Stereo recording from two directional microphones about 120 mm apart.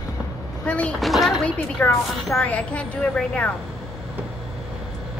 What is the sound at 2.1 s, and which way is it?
A woman's voice, centre (ahead or behind).